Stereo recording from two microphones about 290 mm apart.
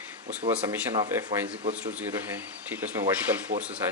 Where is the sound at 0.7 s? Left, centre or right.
Centre.